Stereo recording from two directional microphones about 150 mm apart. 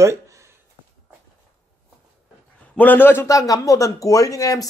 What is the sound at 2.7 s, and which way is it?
A man's voice, 10° left (ahead or behind).